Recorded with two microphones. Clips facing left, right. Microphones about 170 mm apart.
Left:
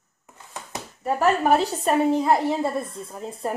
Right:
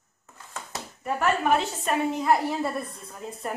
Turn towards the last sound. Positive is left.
turn(degrees=30)  # may be behind; listen again after turning